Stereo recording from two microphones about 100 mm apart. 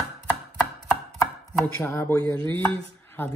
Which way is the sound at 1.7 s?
25° left (ahead or behind).